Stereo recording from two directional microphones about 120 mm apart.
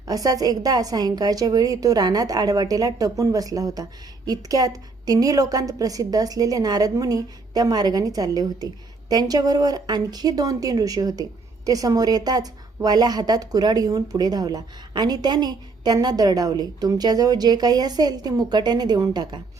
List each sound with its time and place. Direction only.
0.1 s a woman's voice: 30° right (ahead or behind)